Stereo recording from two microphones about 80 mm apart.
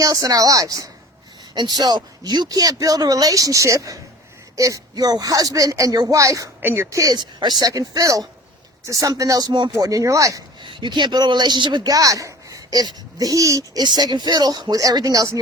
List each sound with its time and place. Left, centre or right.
0.0 s speech: right
1.5 s speech: right
6.6 s speech: right
6.9 s speech: right
7.7 s speech: right
9.5 s speech: right
9.7 s speech: right
10.6 s speech: right
11.9 s speech: right
13.8 s speech: right